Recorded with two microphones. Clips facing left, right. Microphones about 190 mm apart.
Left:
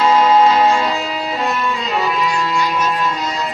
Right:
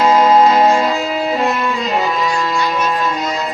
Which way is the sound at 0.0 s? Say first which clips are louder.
Right 2 dB; 45° right (ahead or behind).